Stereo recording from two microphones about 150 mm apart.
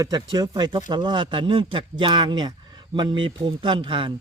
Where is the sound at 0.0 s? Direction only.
25° right (ahead or behind).